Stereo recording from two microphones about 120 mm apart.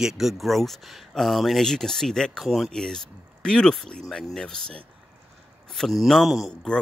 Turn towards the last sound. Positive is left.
turn(degrees=5)  # may be behind; listen again after turning